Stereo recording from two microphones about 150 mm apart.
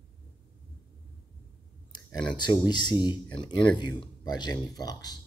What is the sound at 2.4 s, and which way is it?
Speech, 30° left (ahead or behind).